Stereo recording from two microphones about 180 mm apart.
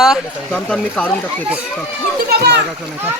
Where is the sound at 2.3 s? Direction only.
65° right (ahead or behind).